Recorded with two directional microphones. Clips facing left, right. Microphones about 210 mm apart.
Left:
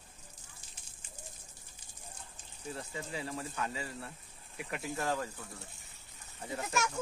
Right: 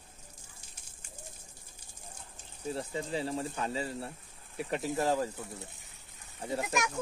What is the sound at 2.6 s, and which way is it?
Speech, 30° right (ahead or behind).